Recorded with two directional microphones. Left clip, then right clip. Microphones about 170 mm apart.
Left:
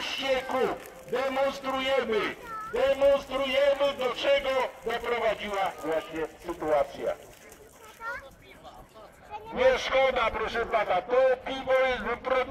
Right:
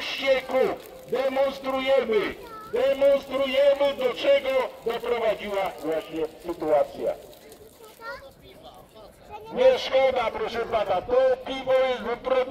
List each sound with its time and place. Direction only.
0.0 s a man's voice: 55° right (ahead or behind); by 6.2 s 35° right (ahead or behind)
6.4 s speech: 25° right (ahead or behind)
9.5 s a man's voice: 15° right (ahead or behind)